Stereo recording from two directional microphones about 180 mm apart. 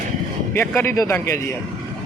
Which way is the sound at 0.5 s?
10° left (ahead or behind).